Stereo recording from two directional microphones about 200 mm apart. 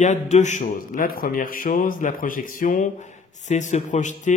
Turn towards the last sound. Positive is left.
turn(degrees=40)  # may be behind; listen again after turning